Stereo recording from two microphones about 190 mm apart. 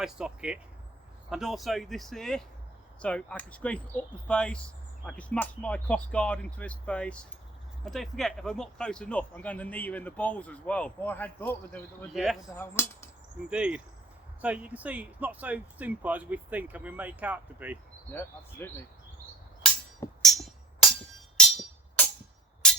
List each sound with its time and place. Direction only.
0.0 s speech: 5° right (ahead or behind)
12.1 s speech: centre (ahead or behind)
12.5 s speech: 10° left (ahead or behind)
13.5 s speech: 5° right (ahead or behind)
18.1 s speech: 10° left (ahead or behind)
20.2 s music: centre (ahead or behind)